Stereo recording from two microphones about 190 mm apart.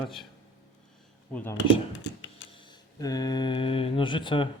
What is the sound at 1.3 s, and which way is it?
Speech, 10° left (ahead or behind).